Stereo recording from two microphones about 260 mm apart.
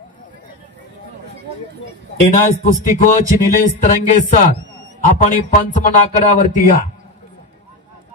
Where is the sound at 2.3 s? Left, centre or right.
Left.